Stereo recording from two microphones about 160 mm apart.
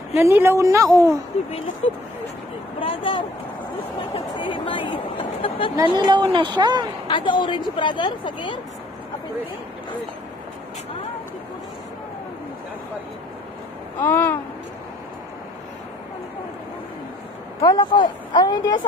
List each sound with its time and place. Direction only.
0.1 s a woman's voice: 15° right (ahead or behind)
1.3 s speech: 40° left (ahead or behind)
2.8 s a sound: 35° left (ahead or behind)
5.8 s a woman's voice: 25° right (ahead or behind)
7.1 s speech: 30° left (ahead or behind)
14.0 s babbling: 10° left (ahead or behind)
17.6 s speech: 25° left (ahead or behind)